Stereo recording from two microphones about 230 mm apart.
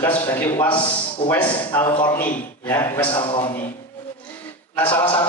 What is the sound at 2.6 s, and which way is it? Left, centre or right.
Speech, centre.